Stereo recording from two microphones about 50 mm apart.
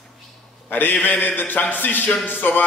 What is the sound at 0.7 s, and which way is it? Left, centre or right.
A man's voice, left.